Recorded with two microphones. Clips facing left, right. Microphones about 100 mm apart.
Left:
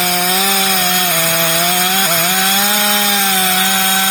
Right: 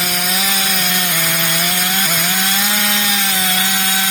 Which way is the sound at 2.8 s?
25° left (ahead or behind).